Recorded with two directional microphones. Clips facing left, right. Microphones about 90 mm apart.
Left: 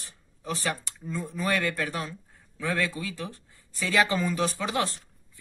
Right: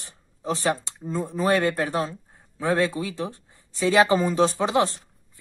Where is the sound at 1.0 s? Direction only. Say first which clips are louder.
Right 6 dB; 35° right (ahead or behind).